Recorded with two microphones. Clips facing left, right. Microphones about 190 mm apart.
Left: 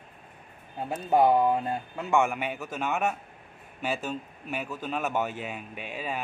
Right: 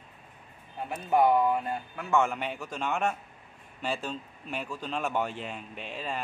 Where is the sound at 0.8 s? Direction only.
25° left (ahead or behind).